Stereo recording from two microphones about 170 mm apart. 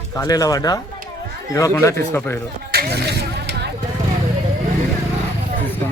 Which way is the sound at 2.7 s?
70° right (ahead or behind).